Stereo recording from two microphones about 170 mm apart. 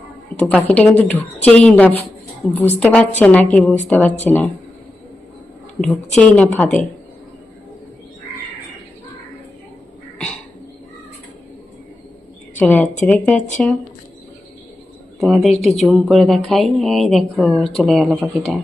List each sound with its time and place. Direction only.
0.3 s a woman's voice: 30° right (ahead or behind)
0.7 s a woman's voice: 10° left (ahead or behind)
6.1 s a woman's voice: 5° left (ahead or behind)
12.5 s a woman's voice: 10° left (ahead or behind)
15.2 s a woman's voice: centre (ahead or behind)